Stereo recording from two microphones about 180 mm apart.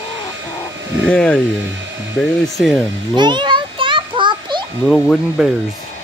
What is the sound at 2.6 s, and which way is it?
Speech, centre (ahead or behind).